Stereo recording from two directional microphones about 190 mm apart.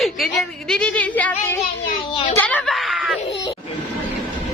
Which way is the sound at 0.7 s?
5° left (ahead or behind).